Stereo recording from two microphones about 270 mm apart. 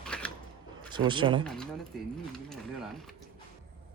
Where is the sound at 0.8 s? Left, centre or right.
Centre.